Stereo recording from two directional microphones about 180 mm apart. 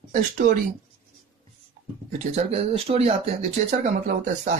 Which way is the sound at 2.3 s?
35° right (ahead or behind).